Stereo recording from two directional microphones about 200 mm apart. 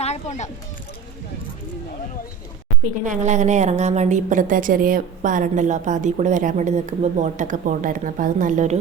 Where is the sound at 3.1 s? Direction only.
35° right (ahead or behind).